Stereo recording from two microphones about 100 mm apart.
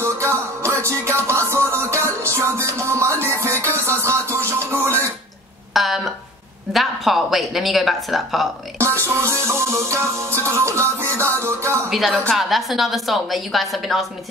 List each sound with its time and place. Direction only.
0.0 s music: 25° right (ahead or behind)
5.7 s a sound: centre (ahead or behind)
6.7 s speech: centre (ahead or behind)
8.7 s music: 25° right (ahead or behind)
11.9 s speech: centre (ahead or behind)